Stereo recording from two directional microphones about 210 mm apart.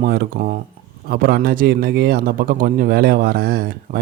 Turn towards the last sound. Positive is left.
turn(degrees=-45)  # may be behind; listen again after turning